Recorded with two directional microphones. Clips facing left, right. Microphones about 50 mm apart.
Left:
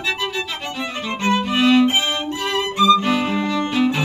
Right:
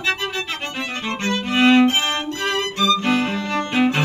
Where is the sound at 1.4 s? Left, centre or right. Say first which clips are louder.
Right 2 dB; right.